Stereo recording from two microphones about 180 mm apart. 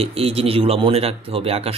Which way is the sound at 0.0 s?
35° right (ahead or behind).